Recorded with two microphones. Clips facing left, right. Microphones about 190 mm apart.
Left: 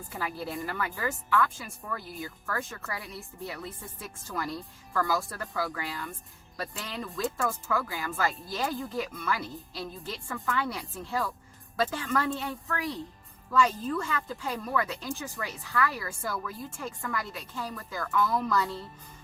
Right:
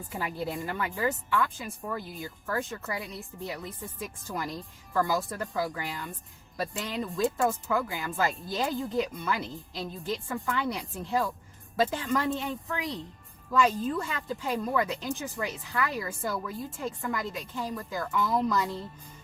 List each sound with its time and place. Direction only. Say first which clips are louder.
0.2 s a woman's voice: right 1 dB; 20° right (ahead or behind)